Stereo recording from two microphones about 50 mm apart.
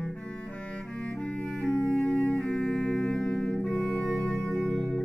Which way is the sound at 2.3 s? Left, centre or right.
Left.